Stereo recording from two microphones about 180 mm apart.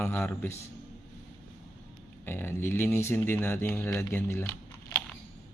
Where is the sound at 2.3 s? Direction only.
10° left (ahead or behind).